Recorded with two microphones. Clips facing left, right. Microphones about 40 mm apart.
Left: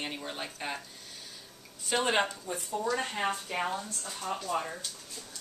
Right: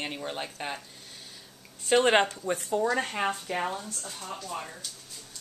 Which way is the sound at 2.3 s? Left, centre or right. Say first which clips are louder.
Right 6 dB; right.